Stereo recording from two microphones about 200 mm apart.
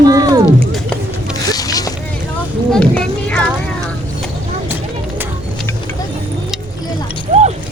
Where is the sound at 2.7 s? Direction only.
5° left (ahead or behind).